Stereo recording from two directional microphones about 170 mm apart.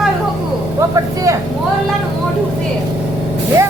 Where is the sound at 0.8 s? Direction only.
20° right (ahead or behind).